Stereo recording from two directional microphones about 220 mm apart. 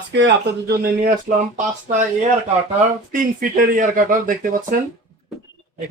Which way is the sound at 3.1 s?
40° right (ahead or behind).